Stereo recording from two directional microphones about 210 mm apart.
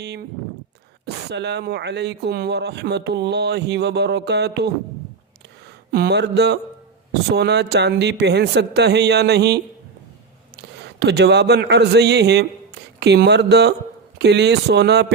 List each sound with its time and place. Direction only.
0.0 s speech: 50° right (ahead or behind)
5.9 s speech: 50° right (ahead or behind)
10.6 s speech: 55° right (ahead or behind)